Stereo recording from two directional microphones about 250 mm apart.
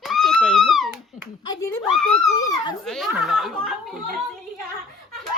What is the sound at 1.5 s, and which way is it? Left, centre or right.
Speech, centre.